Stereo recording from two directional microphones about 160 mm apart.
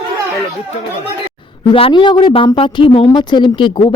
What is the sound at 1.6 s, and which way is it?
Speech, 30° left (ahead or behind).